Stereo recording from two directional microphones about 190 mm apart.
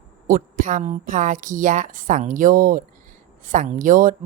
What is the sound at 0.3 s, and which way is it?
Speech, 45° right (ahead or behind).